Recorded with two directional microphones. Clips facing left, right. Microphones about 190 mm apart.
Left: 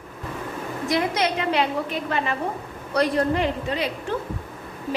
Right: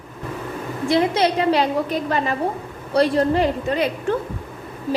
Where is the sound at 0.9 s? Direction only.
30° right (ahead or behind).